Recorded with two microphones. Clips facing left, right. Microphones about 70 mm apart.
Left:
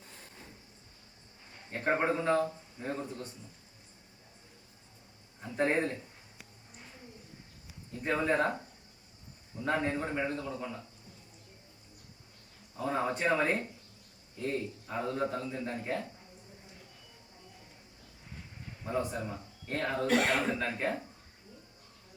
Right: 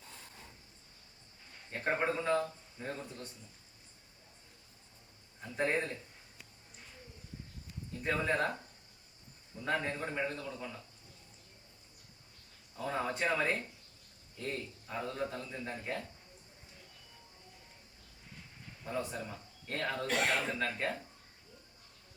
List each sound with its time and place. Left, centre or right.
1.7 s a man's voice: centre
3.1 s a man's voice: centre
5.5 s a man's voice: left
8.1 s speech: centre
9.6 s a man's voice: left
12.8 s speech: centre
14.3 s a man's voice: centre
15.7 s speech: left
18.9 s a man's voice: left
20.4 s speech: centre